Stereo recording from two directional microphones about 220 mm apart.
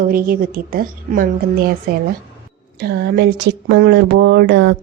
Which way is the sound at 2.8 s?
50° right (ahead or behind).